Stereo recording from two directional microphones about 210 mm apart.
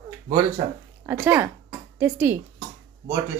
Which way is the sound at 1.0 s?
10° right (ahead or behind).